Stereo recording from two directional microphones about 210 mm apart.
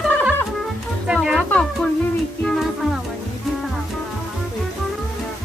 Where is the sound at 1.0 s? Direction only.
5° right (ahead or behind).